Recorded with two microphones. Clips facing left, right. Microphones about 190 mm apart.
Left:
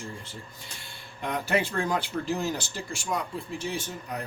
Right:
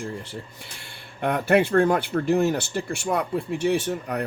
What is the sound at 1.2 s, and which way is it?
Speech, 60° right (ahead or behind).